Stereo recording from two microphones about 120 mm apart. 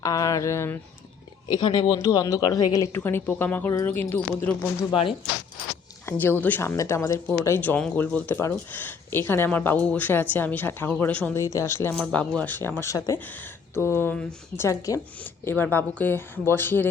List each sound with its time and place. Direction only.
0.0 s speech: 30° left (ahead or behind)
1.5 s speech: 35° left (ahead or behind)
2.9 s a woman's voice: 20° left (ahead or behind)
6.1 s a woman's voice: 15° left (ahead or behind)
11.3 s speech: 25° left (ahead or behind)
11.9 s a woman's voice: 10° left (ahead or behind)
14.6 s speech: 25° left (ahead or behind)
15.2 s a woman's voice: 15° left (ahead or behind)